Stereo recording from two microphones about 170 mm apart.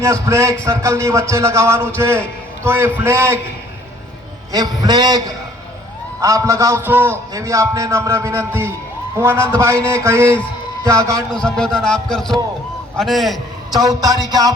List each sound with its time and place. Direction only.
0.0 s a man's voice: 15° right (ahead or behind)
4.5 s a man's voice: 20° right (ahead or behind)
11.3 s speech: 5° left (ahead or behind)
13.7 s speech: 20° right (ahead or behind)